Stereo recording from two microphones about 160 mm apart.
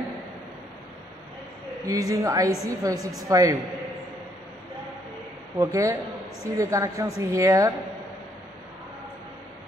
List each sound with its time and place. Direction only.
1.9 s a woman's voice: 20° right (ahead or behind)
5.6 s a woman's voice: 20° right (ahead or behind)